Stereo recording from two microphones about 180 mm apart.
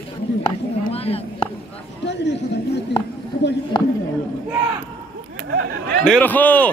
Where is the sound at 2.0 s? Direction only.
75° left (ahead or behind).